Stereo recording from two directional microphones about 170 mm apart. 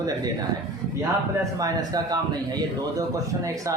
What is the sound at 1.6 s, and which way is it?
Speech, 25° right (ahead or behind).